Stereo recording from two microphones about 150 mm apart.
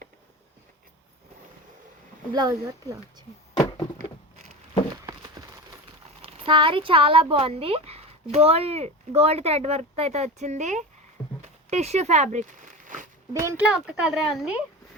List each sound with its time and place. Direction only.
2.3 s speech: 25° right (ahead or behind)
6.2 s speech: 40° right (ahead or behind)
13.4 s speech: 20° right (ahead or behind)
13.7 s speech: 5° right (ahead or behind)